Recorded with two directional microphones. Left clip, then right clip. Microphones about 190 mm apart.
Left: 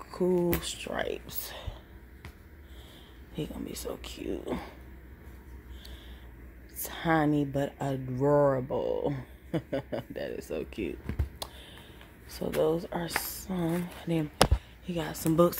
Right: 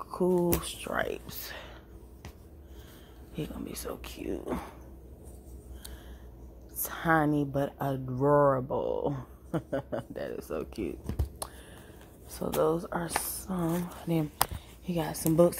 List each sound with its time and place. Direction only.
0.1 s speech: centre (ahead or behind)
3.3 s speech: centre (ahead or behind)
6.8 s speech: 5° left (ahead or behind)
12.4 s speech: 5° left (ahead or behind)
13.2 s a sound: 25° left (ahead or behind)
13.5 s speech: centre (ahead or behind)